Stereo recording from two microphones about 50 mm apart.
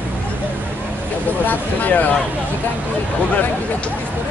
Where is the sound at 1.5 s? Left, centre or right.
Left.